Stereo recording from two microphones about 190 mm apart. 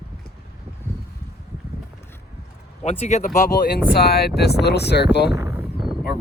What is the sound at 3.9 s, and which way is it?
Speech, 55° left (ahead or behind).